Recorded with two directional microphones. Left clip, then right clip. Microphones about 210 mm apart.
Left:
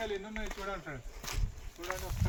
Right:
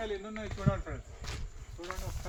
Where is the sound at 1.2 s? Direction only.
60° left (ahead or behind).